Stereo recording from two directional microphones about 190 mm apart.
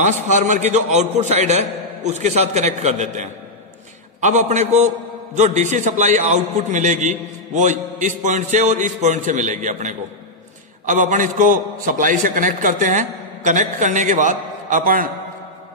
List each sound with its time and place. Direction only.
0.0 s a man's voice: 40° right (ahead or behind)